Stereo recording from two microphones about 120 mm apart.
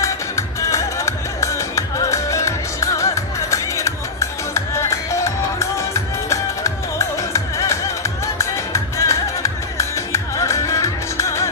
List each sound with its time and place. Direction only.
0.0 s music: 25° left (ahead or behind)